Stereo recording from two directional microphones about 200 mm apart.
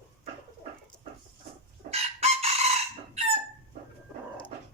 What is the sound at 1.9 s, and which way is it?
Chicken, 30° right (ahead or behind).